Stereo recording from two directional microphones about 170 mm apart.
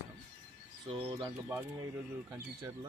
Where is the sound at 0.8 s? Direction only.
30° right (ahead or behind).